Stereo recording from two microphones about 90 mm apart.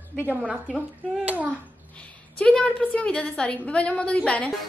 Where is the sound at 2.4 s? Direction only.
10° left (ahead or behind).